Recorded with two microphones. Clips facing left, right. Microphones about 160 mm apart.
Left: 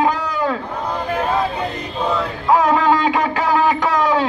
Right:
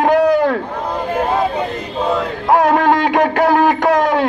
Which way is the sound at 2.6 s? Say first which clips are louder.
Right 3 dB; 60° right (ahead or behind).